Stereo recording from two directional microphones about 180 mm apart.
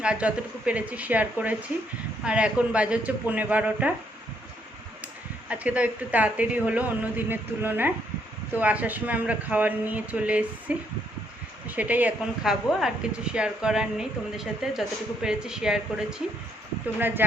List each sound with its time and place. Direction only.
0.0 s speech: 5° right (ahead or behind)
5.5 s speech: 5° right (ahead or behind)